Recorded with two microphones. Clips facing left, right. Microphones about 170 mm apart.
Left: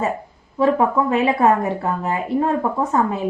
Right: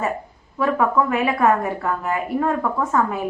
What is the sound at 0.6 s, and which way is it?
Speech, 25° left (ahead or behind).